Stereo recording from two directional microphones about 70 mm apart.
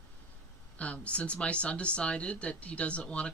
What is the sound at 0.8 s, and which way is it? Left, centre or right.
Speech, centre.